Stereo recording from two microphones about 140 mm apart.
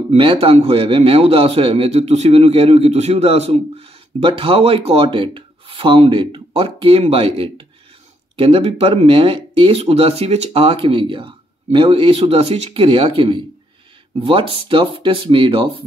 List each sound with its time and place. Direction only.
0.1 s a man's voice: 40° right (ahead or behind)